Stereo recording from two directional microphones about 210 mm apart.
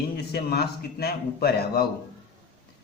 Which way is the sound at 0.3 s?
50° left (ahead or behind).